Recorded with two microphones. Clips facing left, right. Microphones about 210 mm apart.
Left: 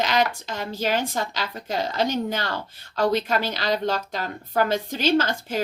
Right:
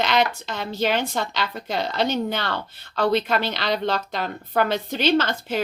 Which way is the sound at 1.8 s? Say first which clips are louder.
Even; 70° right (ahead or behind).